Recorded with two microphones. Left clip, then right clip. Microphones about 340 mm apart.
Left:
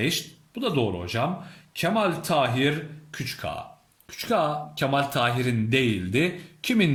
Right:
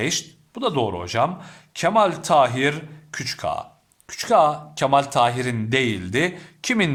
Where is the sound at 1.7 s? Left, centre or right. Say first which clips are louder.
Right 6 dB; centre.